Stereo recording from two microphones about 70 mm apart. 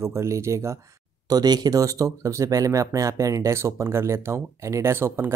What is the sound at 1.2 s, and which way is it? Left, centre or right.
Speech, right.